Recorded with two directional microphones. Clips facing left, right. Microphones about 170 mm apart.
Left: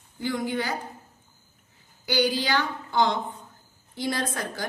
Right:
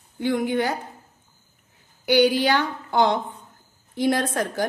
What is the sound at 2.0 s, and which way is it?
A woman's voice, 60° right (ahead or behind).